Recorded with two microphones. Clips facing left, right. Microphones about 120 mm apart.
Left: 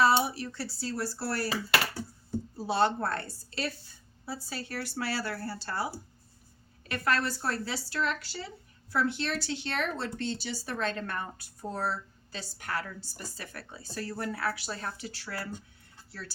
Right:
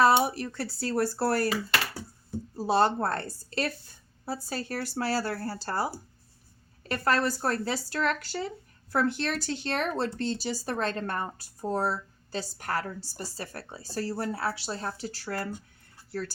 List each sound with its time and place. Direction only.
0.0 s speech: 50° right (ahead or behind)
2.6 s speech: 40° right (ahead or behind)